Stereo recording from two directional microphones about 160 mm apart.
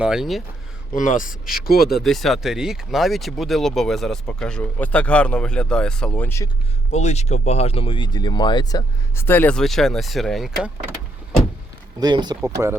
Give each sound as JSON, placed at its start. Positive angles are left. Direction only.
{"t": 0.0, "sound": "speech", "side_deg": -5}
{"t": 0.9, "sound": "speech", "side_deg": 55}
{"t": 1.5, "sound": "speech", "side_deg": 70}
{"t": 2.0, "sound": "speech", "side_deg": 0}
{"t": 6.9, "sound": "speech", "side_deg": 45}
{"t": 9.1, "sound": "speech", "side_deg": 15}
{"t": 11.9, "sound": "speech", "side_deg": -25}
{"t": 12.6, "sound": "speech", "side_deg": -15}